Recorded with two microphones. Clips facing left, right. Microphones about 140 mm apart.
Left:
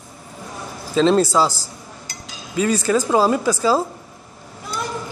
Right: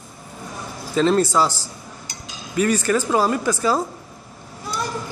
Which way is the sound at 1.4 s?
35° left (ahead or behind).